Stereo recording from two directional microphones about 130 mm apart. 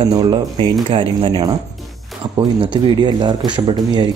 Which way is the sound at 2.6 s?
35° right (ahead or behind).